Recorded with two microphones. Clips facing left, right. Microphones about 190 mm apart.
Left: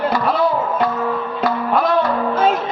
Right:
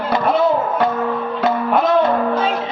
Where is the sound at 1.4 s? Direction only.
20° right (ahead or behind).